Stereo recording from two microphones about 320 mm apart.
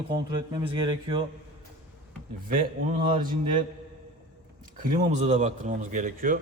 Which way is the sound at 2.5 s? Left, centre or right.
Right.